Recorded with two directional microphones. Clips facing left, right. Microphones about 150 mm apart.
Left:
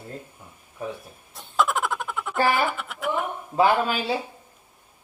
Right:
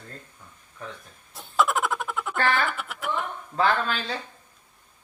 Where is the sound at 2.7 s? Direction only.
Centre (ahead or behind).